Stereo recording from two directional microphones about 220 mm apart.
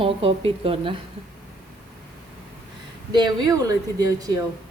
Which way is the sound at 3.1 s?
20° right (ahead or behind).